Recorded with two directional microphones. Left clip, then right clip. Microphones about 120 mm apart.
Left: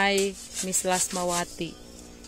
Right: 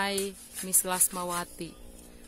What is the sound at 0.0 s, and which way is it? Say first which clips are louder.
Speech: left 7 dB; 10° right (ahead or behind).